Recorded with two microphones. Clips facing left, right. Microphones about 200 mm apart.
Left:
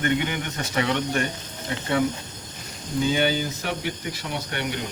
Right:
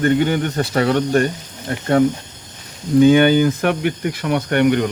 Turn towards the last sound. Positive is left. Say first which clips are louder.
# right 14 dB
turn(degrees=-60)  # may be behind; listen again after turning